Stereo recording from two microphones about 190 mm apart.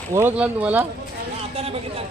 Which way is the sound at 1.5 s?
30° right (ahead or behind).